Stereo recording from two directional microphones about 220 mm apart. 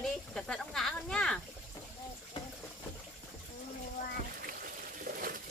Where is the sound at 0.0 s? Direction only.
5° left (ahead or behind).